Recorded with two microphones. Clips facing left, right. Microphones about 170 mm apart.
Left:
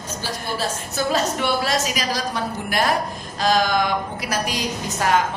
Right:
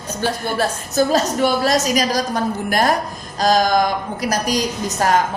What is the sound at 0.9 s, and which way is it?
A woman's voice, 40° right (ahead or behind).